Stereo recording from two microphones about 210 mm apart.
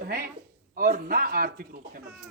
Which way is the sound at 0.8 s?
40° right (ahead or behind).